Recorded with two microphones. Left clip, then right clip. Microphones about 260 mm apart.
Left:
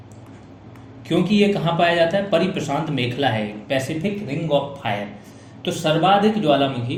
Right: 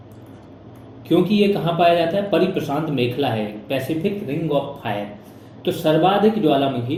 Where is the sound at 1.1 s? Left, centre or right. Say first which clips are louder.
Right 2 dB; left.